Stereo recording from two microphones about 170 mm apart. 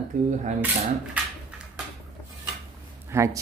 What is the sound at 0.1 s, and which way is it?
Cutlery, 50° right (ahead or behind).